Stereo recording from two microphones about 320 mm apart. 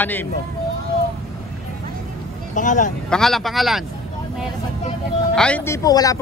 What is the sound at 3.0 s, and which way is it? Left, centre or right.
Speech, centre.